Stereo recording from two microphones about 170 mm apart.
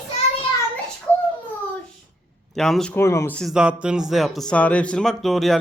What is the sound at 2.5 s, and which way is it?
Speech, centre (ahead or behind).